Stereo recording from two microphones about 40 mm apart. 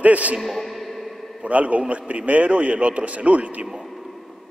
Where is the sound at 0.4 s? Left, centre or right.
Centre.